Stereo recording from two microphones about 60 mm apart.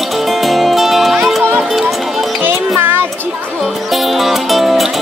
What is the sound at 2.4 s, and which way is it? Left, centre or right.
Music, right.